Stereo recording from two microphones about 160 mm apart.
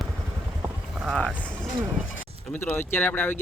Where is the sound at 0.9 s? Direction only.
Centre (ahead or behind).